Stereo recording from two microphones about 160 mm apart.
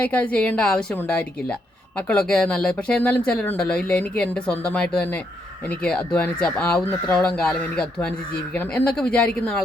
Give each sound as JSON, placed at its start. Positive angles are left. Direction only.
{"t": 0.0, "sound": "speech", "side_deg": 10}